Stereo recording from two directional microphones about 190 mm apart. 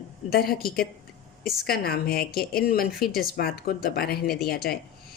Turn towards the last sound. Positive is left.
turn(degrees=55)  # may be behind; listen again after turning